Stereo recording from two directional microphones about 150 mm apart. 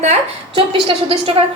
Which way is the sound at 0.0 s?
40° right (ahead or behind).